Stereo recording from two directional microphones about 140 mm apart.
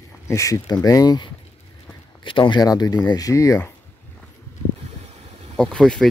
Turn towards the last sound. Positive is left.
turn(degrees=5)  # may be behind; listen again after turning